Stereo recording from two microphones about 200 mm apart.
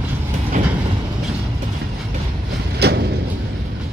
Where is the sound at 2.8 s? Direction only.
55° right (ahead or behind).